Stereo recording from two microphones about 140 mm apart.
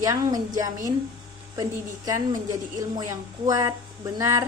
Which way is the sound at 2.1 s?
25° right (ahead or behind).